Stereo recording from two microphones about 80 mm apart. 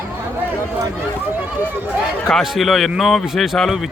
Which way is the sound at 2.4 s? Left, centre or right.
Centre.